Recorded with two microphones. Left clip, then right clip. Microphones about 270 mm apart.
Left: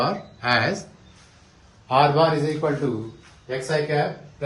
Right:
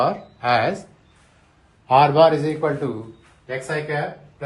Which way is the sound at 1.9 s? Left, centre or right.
Right.